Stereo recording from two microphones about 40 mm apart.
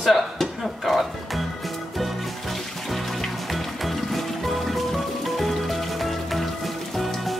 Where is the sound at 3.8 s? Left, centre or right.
Centre.